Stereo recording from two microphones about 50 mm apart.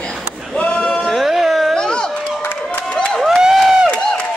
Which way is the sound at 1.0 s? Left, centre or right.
Centre.